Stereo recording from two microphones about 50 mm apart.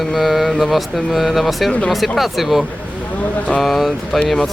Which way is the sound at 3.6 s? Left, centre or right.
Centre.